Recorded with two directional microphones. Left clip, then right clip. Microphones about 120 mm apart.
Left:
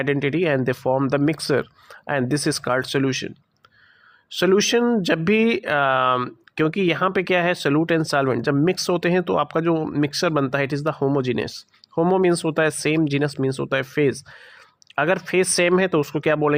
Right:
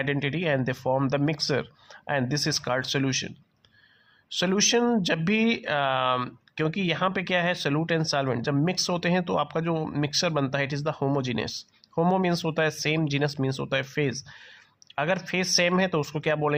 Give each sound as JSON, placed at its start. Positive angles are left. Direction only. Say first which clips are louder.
{"t": 0.0, "sound": "speech", "louder": "left 7 dB", "side_deg": 40}
{"t": 5.1, "sound": "speech", "louder": "left 6 dB", "side_deg": 40}